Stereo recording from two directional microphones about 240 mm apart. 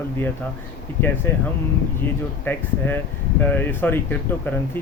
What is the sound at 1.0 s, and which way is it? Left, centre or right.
Speech, left.